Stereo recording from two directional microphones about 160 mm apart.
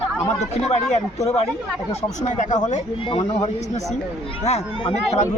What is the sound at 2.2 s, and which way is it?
Speech, 50° left (ahead or behind).